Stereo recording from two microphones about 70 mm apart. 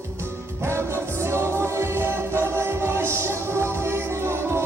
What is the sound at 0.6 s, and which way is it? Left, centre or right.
Music, right.